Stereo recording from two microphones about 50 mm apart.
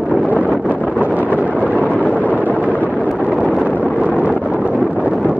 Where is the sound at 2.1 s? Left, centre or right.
Left.